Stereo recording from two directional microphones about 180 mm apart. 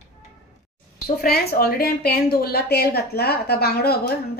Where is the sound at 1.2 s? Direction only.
55° left (ahead or behind).